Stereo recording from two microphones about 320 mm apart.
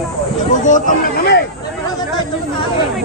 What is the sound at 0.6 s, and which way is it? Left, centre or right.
Speech, left.